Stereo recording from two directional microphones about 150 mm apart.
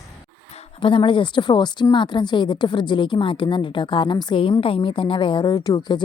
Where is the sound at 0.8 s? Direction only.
35° left (ahead or behind).